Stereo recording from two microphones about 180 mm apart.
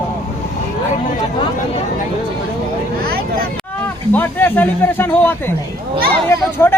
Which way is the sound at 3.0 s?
55° right (ahead or behind).